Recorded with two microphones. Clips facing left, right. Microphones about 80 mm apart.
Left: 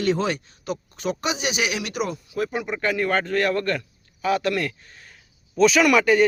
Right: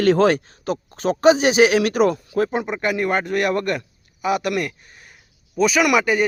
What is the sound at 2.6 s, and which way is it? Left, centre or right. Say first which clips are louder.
Speech: right 2 dB; centre.